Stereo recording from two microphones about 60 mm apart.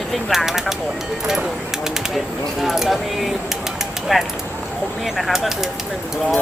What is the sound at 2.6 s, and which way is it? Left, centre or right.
Speech, centre.